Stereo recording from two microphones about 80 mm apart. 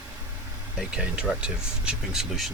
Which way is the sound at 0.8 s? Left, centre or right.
Centre.